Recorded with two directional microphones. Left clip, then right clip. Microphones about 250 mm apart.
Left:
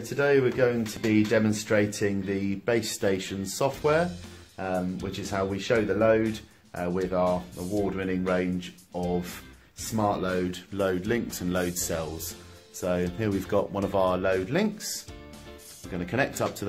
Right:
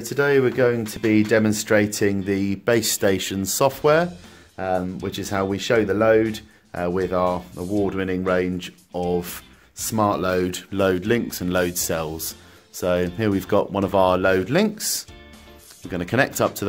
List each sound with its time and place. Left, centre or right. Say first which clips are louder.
0.1 s speech: right 4 dB; right
15.9 s speech: right 7 dB; right